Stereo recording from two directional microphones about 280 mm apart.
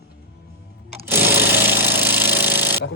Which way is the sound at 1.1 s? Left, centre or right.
Centre.